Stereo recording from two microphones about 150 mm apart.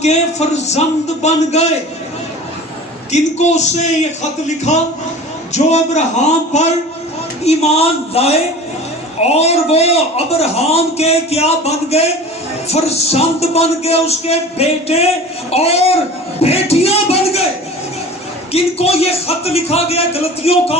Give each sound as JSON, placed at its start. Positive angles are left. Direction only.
{"t": 0.0, "sound": "a man's voice", "side_deg": 50}
{"t": 3.1, "sound": "a man's voice", "side_deg": 50}
{"t": 18.5, "sound": "a man's voice", "side_deg": 40}